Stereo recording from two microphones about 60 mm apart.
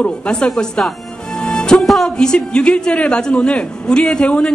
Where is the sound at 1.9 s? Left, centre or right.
Centre.